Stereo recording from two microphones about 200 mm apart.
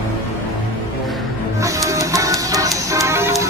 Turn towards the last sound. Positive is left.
turn(degrees=-15)  # may be behind; listen again after turning